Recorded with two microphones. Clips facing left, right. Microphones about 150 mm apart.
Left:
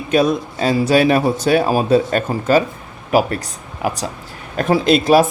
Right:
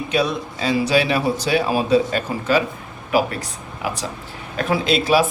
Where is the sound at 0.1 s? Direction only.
50° left (ahead or behind).